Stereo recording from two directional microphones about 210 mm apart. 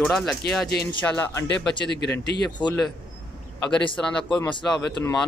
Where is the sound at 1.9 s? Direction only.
55° left (ahead or behind).